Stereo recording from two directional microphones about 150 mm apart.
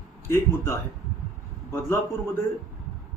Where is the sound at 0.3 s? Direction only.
15° left (ahead or behind).